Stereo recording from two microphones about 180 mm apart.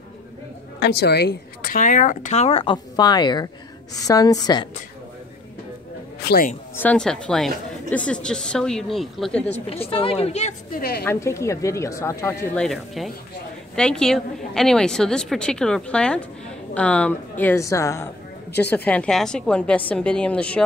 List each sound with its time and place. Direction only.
0.7 s a woman's voice: 65° left (ahead or behind); by 4.6 s 20° left (ahead or behind)
6.2 s a woman's voice: 55° left (ahead or behind)
6.8 s a woman's voice: 5° left (ahead or behind)
9.8 s a woman's voice: 30° left (ahead or behind)
10.8 s a woman's voice: 60° left (ahead or behind)
11.1 s a woman's voice: 15° left (ahead or behind)
12.5 s a woman's voice: centre (ahead or behind)